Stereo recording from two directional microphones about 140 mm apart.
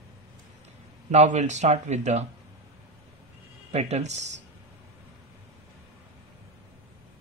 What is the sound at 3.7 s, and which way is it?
Speech, 50° right (ahead or behind).